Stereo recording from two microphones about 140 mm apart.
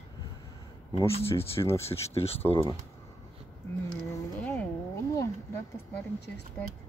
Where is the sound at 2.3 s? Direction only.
45° left (ahead or behind).